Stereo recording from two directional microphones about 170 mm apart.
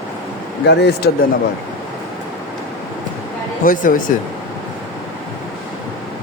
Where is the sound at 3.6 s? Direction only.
50° left (ahead or behind).